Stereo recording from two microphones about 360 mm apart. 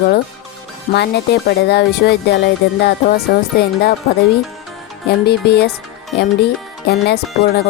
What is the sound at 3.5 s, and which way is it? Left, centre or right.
Speech, left.